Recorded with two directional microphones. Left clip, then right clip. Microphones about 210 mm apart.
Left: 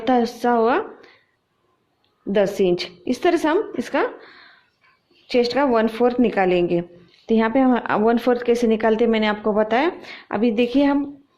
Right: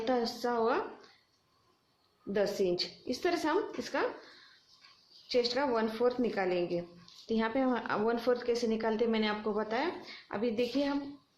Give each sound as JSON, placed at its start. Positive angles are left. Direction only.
{"t": 0.0, "sound": "a woman's voice", "side_deg": 40}
{"t": 2.3, "sound": "a woman's voice", "side_deg": 40}
{"t": 5.3, "sound": "a woman's voice", "side_deg": 40}